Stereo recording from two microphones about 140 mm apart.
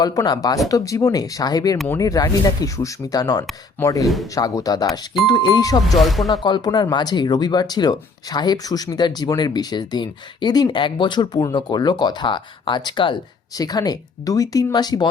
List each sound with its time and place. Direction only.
0.0 s speech: 25° left (ahead or behind)
6.0 s speech: centre (ahead or behind)
6.4 s speech: 30° left (ahead or behind)